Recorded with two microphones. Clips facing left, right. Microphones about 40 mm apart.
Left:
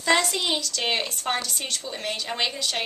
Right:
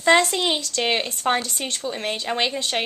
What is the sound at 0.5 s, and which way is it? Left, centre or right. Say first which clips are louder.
Speech: right 3 dB; right.